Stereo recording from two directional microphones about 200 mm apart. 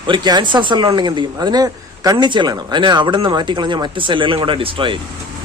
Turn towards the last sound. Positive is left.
turn(degrees=-25)  # may be behind; listen again after turning